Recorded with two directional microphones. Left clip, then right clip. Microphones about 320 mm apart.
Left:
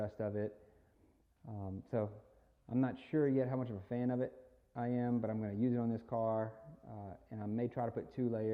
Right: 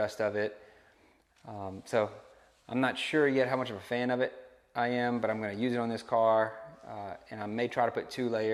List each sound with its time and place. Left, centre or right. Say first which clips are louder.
0.0 s speech: right 9 dB; centre
1.6 s speech: right 9 dB; centre